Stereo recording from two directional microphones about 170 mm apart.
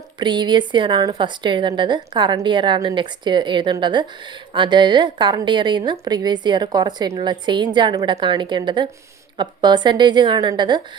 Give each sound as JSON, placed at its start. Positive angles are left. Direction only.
{"t": 0.2, "sound": "a woman's voice", "side_deg": -25}